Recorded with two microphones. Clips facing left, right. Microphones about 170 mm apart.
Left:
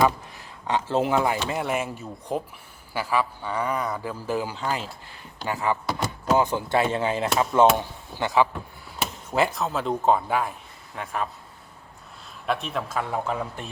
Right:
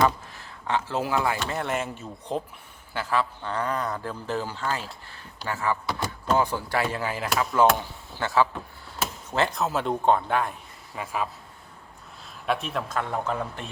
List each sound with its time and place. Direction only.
0.3 s a man's voice: 20° left (ahead or behind)
9.6 s speech: centre (ahead or behind)
12.5 s speech: centre (ahead or behind)